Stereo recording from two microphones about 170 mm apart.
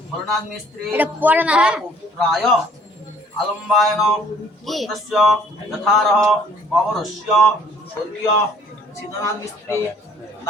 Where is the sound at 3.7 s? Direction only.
Centre (ahead or behind).